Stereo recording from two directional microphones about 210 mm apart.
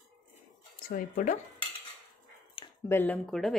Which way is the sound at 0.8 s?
40° left (ahead or behind).